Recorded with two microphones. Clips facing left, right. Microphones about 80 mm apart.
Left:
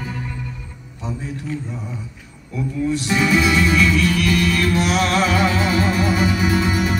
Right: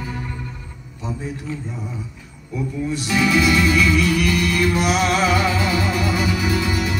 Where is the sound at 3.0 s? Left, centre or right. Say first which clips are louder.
Right 2 dB; left.